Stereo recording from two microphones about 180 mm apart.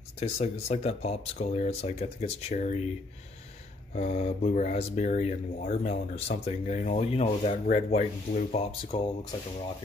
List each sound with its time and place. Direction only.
0.2 s speech: 35° left (ahead or behind)
3.9 s speech: 40° left (ahead or behind)
8.9 s speech: 25° left (ahead or behind)